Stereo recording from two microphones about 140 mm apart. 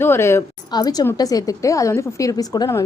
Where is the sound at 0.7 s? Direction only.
30° left (ahead or behind).